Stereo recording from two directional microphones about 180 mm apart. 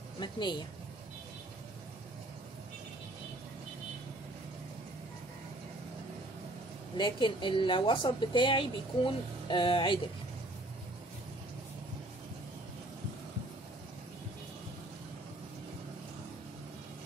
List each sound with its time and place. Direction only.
0.2 s a woman's voice: 25° left (ahead or behind)
7.0 s a woman's voice: 25° left (ahead or behind)